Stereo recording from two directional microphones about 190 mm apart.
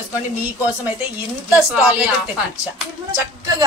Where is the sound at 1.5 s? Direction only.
5° right (ahead or behind).